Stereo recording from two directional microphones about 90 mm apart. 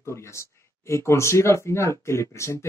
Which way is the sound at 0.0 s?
30° left (ahead or behind).